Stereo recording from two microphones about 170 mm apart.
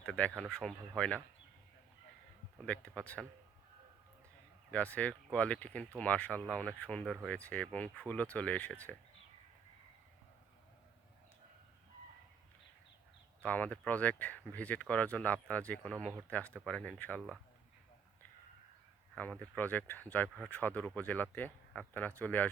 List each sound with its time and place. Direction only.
0.0 s speech: 5° left (ahead or behind)
2.6 s speech: 5° left (ahead or behind)
4.7 s speech: 10° left (ahead or behind)
13.4 s speech: 10° left (ahead or behind)
19.1 s speech: 10° left (ahead or behind)